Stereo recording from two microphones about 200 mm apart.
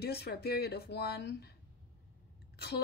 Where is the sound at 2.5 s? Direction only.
55° left (ahead or behind).